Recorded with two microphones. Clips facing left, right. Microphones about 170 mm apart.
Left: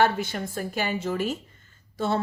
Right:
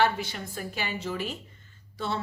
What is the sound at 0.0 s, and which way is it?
A woman's voice, 50° left (ahead or behind).